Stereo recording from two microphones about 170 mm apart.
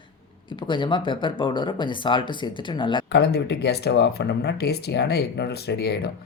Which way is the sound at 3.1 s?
75° left (ahead or behind).